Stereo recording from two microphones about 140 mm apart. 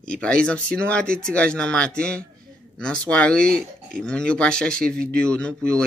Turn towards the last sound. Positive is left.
turn(degrees=5)  # may be behind; listen again after turning